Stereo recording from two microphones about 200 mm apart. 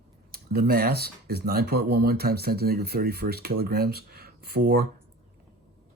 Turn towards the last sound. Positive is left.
turn(degrees=-50)  # may be behind; listen again after turning